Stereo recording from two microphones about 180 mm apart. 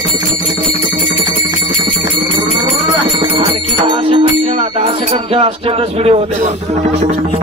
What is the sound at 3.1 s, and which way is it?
Music, 30° right (ahead or behind).